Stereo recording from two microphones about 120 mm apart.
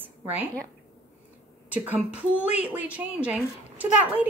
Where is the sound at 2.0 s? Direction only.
10° right (ahead or behind).